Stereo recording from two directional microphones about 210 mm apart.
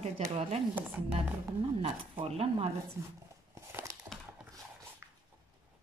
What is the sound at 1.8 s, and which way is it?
Speech, 30° right (ahead or behind).